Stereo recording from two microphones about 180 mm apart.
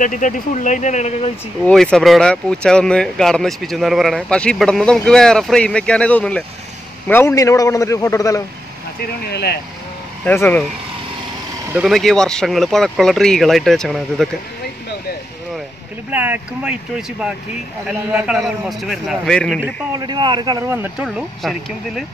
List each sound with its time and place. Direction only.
0.0 s speech: 45° left (ahead or behind)
1.7 s a man's voice: 5° left (ahead or behind)
9.2 s speech: 65° left (ahead or behind)
10.2 s a man's voice: 10° left (ahead or behind)
11.7 s speech: 5° right (ahead or behind)
16.1 s speech: 10° right (ahead or behind)
20.0 s speech: 25° right (ahead or behind)
21.2 s speech: centre (ahead or behind)